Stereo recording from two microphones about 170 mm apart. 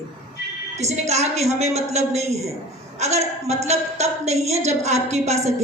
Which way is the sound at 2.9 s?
40° right (ahead or behind).